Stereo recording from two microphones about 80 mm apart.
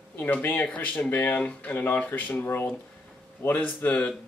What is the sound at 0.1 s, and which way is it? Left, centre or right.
Speech, left.